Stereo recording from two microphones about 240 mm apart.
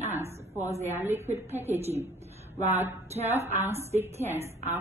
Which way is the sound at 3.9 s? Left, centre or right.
Right.